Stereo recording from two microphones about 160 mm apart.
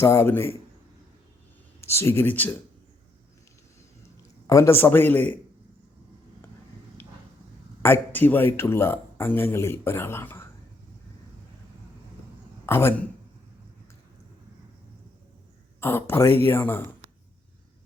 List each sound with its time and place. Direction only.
0.0 s speech: 15° left (ahead or behind)
1.8 s speech: 15° left (ahead or behind)
4.4 s speech: 15° left (ahead or behind)
7.8 s speech: 15° left (ahead or behind)
12.6 s speech: 15° left (ahead or behind)
15.8 s speech: 15° left (ahead or behind)